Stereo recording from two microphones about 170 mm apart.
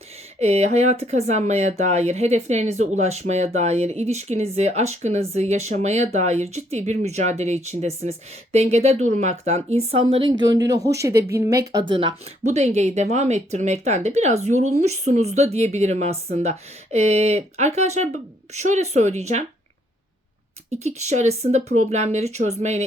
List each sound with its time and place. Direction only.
0.3 s speech: 40° right (ahead or behind); by 11.6 s 15° right (ahead or behind)
11.7 s speech: 30° right (ahead or behind)
12.5 s speech: 40° right (ahead or behind)
20.7 s speech: 40° right (ahead or behind)